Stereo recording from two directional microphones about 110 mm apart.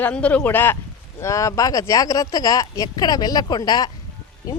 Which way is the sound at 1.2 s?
30° left (ahead or behind).